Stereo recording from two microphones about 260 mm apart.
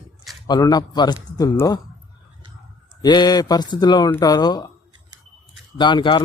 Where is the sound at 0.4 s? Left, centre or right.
Centre.